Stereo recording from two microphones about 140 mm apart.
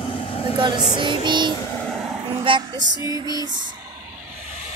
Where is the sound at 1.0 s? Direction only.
35° right (ahead or behind).